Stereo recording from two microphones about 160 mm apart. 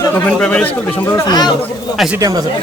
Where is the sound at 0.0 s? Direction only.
10° left (ahead or behind).